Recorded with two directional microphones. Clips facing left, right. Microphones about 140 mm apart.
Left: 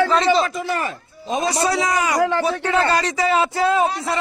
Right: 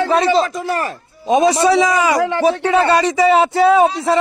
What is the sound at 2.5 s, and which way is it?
Speech, 70° right (ahead or behind).